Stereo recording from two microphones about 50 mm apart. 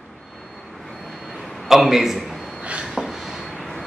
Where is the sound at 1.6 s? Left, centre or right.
Centre.